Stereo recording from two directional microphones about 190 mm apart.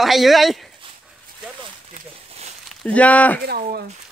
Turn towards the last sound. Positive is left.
turn(degrees=-55)  # may be behind; listen again after turning